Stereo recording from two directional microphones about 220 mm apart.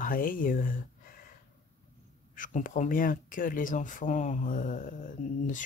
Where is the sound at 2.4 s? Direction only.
35° left (ahead or behind).